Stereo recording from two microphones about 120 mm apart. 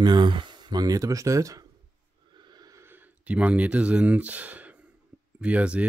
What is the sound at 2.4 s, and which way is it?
Snort, 35° right (ahead or behind).